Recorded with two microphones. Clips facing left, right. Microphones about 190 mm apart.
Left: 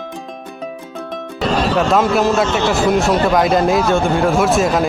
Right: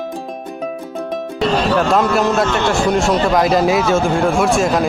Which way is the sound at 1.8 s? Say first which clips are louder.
Left 3 dB; centre (ahead or behind).